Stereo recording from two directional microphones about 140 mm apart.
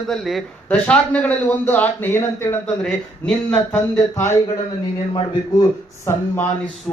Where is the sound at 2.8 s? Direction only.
5° left (ahead or behind).